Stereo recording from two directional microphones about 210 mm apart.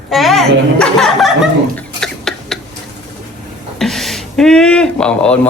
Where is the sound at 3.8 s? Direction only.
Centre (ahead or behind).